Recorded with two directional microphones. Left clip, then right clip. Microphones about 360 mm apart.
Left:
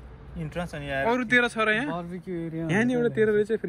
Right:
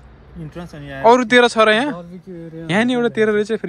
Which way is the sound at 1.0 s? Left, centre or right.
Centre.